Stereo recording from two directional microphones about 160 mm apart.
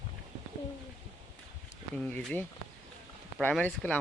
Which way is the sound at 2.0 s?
10° left (ahead or behind).